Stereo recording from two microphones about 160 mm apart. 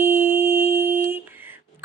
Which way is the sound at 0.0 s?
15° right (ahead or behind).